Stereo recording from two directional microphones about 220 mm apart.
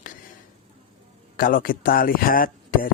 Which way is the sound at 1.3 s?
40° left (ahead or behind).